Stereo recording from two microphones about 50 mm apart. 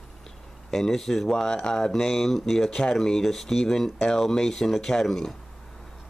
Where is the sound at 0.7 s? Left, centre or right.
Centre.